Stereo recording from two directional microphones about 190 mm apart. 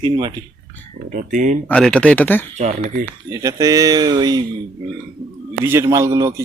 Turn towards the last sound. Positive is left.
turn(degrees=-15)  # may be behind; listen again after turning